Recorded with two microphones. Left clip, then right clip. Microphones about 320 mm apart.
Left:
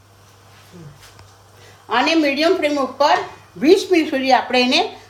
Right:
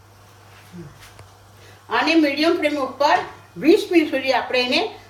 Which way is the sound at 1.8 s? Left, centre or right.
Left.